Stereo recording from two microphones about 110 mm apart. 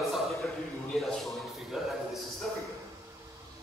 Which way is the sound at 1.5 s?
Centre (ahead or behind).